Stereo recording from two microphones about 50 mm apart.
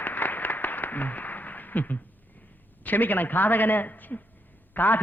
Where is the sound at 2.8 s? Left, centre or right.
Left.